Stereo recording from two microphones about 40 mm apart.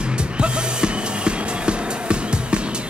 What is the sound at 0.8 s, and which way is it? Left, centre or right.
Music, right.